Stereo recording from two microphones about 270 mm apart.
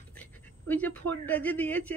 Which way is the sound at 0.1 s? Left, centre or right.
Centre.